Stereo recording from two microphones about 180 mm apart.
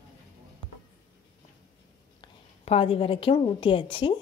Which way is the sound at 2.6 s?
30° left (ahead or behind).